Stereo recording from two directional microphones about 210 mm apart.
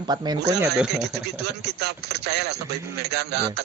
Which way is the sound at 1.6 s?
50° right (ahead or behind).